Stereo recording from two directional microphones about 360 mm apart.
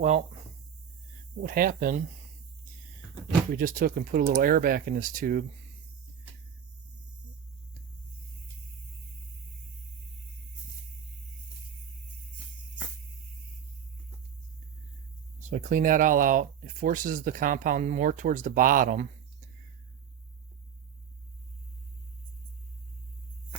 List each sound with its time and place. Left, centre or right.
1.4 s speech: right
3.5 s speech: right
15.4 s speech: right